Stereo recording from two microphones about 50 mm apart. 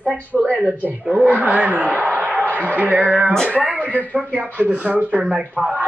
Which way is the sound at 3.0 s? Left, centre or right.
Right.